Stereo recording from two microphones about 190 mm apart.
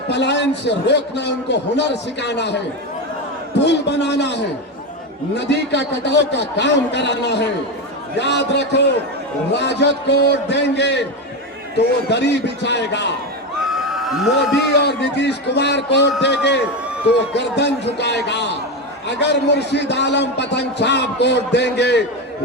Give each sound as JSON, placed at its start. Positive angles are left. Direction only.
{"t": 0.1, "sound": "a man's voice", "side_deg": 65}
{"t": 3.6, "sound": "a man's voice", "side_deg": 65}
{"t": 13.7, "sound": "a sound", "side_deg": 0}
{"t": 14.7, "sound": "a man's voice", "side_deg": 60}